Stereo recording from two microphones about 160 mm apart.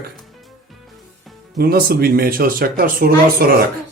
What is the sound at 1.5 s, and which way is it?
Speech, 75° right (ahead or behind).